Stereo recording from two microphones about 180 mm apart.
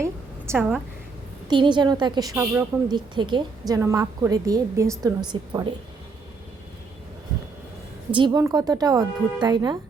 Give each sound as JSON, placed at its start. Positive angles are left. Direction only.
{"t": 0.0, "sound": "a sound", "side_deg": -15}
{"t": 1.5, "sound": "a woman's voice", "side_deg": -25}
{"t": 2.3, "sound": "a woman's voice", "side_deg": -10}
{"t": 2.9, "sound": "a woman's voice", "side_deg": -25}
{"t": 8.1, "sound": "a woman's voice", "side_deg": -25}